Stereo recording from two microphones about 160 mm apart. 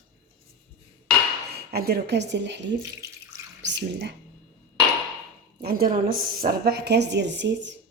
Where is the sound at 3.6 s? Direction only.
90° right.